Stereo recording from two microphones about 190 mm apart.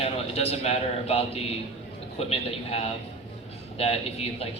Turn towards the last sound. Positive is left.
turn(degrees=30)  # may be behind; listen again after turning